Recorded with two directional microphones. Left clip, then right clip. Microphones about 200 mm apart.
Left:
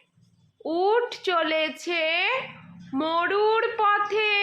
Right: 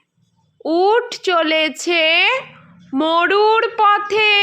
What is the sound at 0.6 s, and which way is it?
A woman's voice, 35° right (ahead or behind).